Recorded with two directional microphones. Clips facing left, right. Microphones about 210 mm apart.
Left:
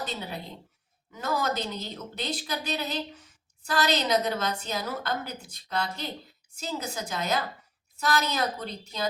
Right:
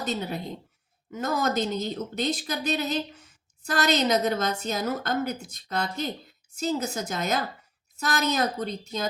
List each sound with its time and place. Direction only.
0.0 s a woman's voice: 45° right (ahead or behind)